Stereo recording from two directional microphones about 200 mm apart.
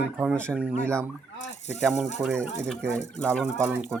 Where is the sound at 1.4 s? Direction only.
35° left (ahead or behind).